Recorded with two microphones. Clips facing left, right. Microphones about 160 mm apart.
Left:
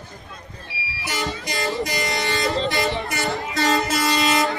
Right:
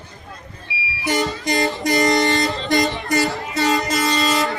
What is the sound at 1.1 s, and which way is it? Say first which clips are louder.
Vehicle: right 7 dB; 45° right (ahead or behind).